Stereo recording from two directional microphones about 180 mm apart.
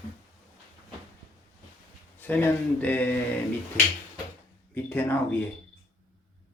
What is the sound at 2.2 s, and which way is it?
Speech, 10° left (ahead or behind).